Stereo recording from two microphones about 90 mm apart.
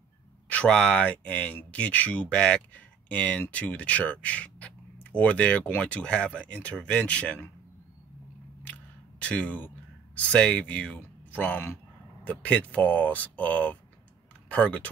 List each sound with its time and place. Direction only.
0.5 s speech: 10° left (ahead or behind)
9.2 s speech: 15° left (ahead or behind)